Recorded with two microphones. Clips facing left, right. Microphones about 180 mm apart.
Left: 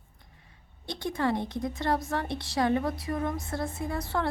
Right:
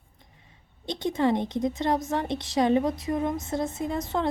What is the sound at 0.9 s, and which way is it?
A woman's voice, 20° right (ahead or behind).